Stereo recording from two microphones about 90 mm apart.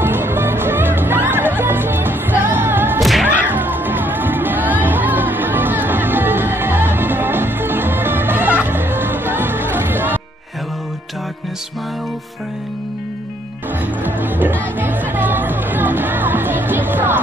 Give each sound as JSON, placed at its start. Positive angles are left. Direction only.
{"t": 0.0, "sound": "music", "side_deg": -25}
{"t": 3.0, "sound": "whip", "side_deg": 0}
{"t": 3.3, "sound": "music", "side_deg": -20}
{"t": 14.0, "sound": "music", "side_deg": -20}